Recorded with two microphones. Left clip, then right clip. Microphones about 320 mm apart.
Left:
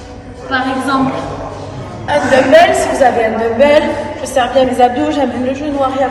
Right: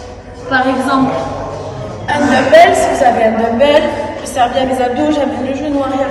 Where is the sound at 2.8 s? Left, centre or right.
Centre.